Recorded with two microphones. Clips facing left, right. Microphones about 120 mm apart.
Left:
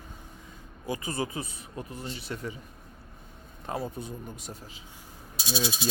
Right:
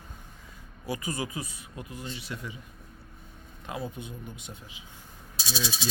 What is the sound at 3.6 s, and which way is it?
Speech, 40° left (ahead or behind).